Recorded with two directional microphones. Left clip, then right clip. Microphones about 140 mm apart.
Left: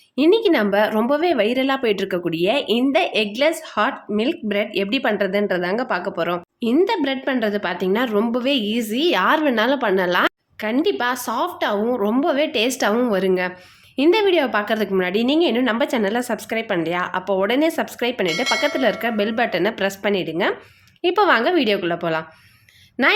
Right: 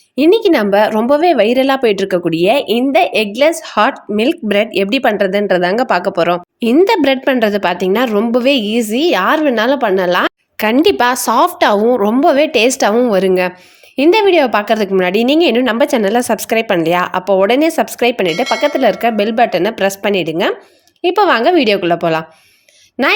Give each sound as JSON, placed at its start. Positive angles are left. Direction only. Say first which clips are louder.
{"t": 0.2, "sound": "a woman's voice", "louder": "right 6 dB", "side_deg": -40}
{"t": 10.6, "sound": "a woman's voice", "louder": "right 9 dB", "side_deg": -65}
{"t": 18.3, "sound": "speech", "louder": "right 5 dB", "side_deg": 0}
{"t": 18.6, "sound": "a woman's voice", "louder": "right 7 dB", "side_deg": -40}
{"t": 23.0, "sound": "a woman's voice", "louder": "right 4 dB", "side_deg": -20}